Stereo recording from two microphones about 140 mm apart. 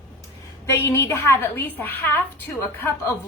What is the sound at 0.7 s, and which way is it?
Speech, 20° left (ahead or behind).